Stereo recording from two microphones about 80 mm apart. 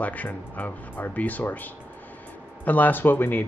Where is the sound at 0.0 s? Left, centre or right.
Centre.